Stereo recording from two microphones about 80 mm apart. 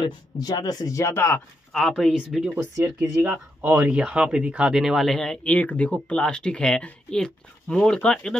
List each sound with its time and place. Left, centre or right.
0.4 s speech: left
1.0 s speech: left
1.7 s speech: centre
2.8 s speech: right; by 8.4 s centre